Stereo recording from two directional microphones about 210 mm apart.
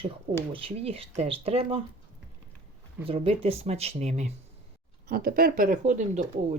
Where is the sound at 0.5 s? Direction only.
25° right (ahead or behind).